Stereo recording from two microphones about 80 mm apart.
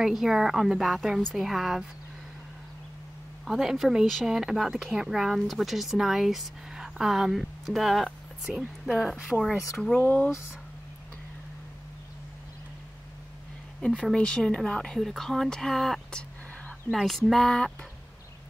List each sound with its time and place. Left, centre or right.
0.0 s speech: centre
3.4 s speech: centre
9.9 s speech: left
13.7 s speech: centre
16.9 s speech: centre